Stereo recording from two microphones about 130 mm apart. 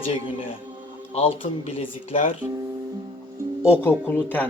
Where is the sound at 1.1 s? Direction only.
45° left (ahead or behind).